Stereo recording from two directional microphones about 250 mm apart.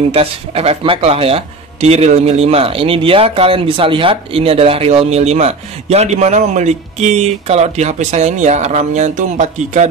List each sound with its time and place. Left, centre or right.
0.1 s speech: right